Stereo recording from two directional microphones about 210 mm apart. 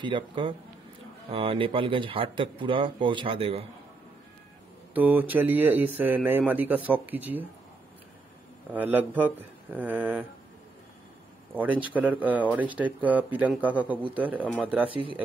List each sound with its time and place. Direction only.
0.0 s speech: 25° right (ahead or behind)
4.9 s speech: 10° right (ahead or behind)
8.7 s speech: 10° right (ahead or behind)
11.5 s speech: 10° right (ahead or behind)
14.9 s speech: 25° right (ahead or behind)